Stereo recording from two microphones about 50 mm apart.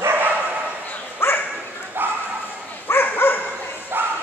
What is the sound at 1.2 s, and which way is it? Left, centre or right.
Bow-wow, left.